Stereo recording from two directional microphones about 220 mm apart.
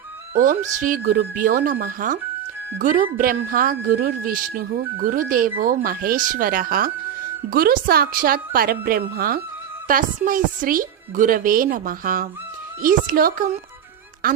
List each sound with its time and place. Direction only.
0.3 s a woman's voice: 35° right (ahead or behind)